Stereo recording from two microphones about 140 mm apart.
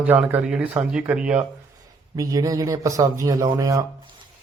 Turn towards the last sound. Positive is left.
turn(degrees=-25)  # may be behind; listen again after turning